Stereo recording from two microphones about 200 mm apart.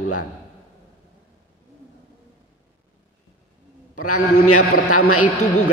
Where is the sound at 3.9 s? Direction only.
90° left.